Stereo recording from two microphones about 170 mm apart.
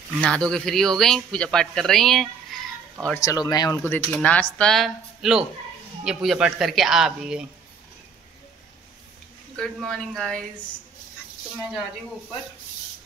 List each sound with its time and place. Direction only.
0.2 s speech: 5° left (ahead or behind)
3.2 s speech: 20° left (ahead or behind)
3.8 s speech: 10° left (ahead or behind)
9.6 s speech: 5° left (ahead or behind)